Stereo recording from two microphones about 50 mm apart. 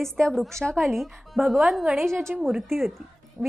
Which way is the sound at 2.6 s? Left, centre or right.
Centre.